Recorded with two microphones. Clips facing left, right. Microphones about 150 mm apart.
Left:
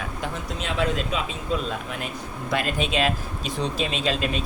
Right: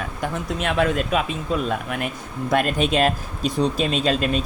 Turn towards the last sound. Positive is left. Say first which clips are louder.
# right 4 dB
turn(degrees=-45)  # may be behind; listen again after turning